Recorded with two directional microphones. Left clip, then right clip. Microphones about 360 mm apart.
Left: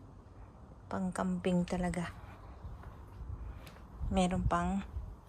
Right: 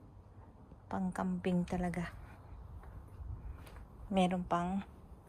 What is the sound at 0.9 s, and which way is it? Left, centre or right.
A woman's voice, centre.